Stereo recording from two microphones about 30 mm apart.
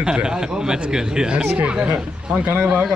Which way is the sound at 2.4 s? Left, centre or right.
Right.